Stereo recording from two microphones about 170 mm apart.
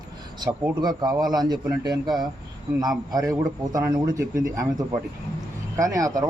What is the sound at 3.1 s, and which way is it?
Speech, 20° right (ahead or behind).